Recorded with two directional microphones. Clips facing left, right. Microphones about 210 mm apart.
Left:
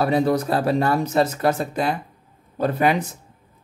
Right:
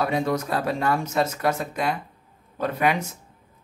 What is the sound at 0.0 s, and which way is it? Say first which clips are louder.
Speech: left 5 dB; 35° left (ahead or behind).